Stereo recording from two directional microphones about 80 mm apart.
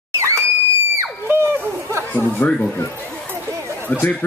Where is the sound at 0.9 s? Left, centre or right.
Right.